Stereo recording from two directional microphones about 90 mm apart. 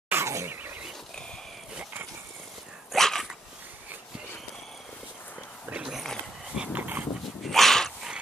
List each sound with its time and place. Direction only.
0.1 s a sound: 30° right (ahead or behind)
2.9 s dog: 5° left (ahead or behind)
5.7 s dog: 10° right (ahead or behind)
7.4 s dog: 5° left (ahead or behind)